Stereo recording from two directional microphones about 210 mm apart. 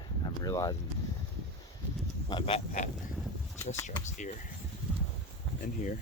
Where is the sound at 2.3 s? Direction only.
25° left (ahead or behind).